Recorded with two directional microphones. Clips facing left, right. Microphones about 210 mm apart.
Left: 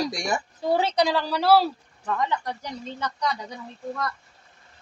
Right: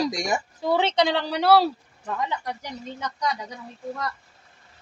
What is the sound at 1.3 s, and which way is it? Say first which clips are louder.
Speech: right 1 dB; 65° right (ahead or behind).